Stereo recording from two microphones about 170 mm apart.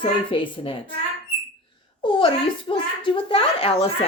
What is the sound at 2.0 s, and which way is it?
Speech, 30° left (ahead or behind).